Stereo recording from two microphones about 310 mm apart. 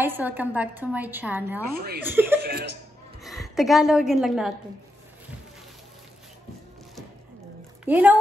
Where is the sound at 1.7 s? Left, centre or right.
Right.